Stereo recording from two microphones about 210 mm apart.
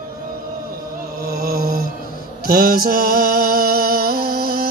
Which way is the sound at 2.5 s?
45° right (ahead or behind).